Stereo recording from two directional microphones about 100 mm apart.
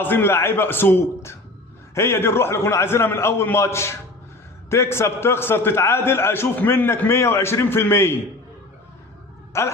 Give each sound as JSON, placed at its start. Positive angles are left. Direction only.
{"t": 0.0, "sound": "a man's voice", "side_deg": 20}
{"t": 9.5, "sound": "a man's voice", "side_deg": 25}